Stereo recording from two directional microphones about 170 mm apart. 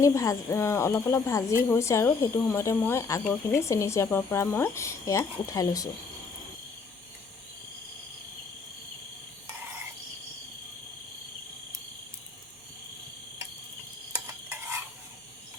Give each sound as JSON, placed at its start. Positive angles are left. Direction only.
{"t": 0.0, "sound": "speech", "side_deg": 20}
{"t": 14.3, "sound": "stir", "side_deg": -15}